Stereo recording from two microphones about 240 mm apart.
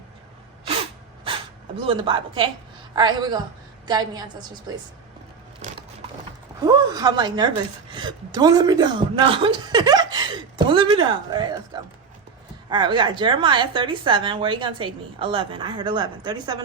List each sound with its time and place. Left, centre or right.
0.8 s sneeze: right
1.8 s a woman's voice: right
6.7 s a woman's voice: centre